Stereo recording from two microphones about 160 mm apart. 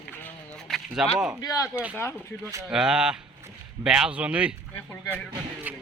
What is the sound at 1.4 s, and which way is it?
Speech, 20° left (ahead or behind).